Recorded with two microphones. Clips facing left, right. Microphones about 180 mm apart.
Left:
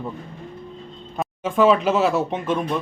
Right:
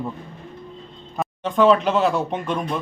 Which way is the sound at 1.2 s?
5° left (ahead or behind).